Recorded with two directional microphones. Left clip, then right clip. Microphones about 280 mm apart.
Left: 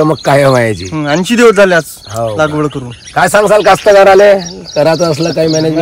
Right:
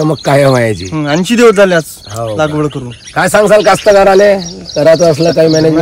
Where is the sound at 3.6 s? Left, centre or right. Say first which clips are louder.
Left 1 dB; left.